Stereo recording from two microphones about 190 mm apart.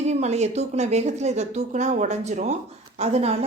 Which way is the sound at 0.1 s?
35° right (ahead or behind).